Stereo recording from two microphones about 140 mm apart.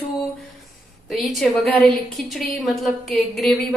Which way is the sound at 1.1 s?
Centre (ahead or behind).